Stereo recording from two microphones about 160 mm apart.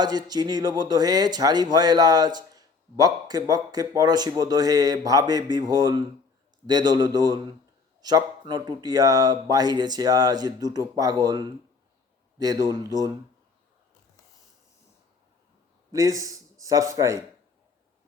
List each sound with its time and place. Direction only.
0.0 s speech: 25° right (ahead or behind)
15.9 s a man's voice: 20° right (ahead or behind)